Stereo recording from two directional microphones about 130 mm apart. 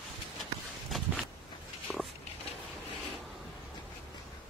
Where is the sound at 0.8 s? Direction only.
Centre (ahead or behind).